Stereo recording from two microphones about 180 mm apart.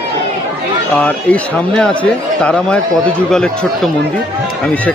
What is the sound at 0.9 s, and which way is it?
Speech, 5° left (ahead or behind).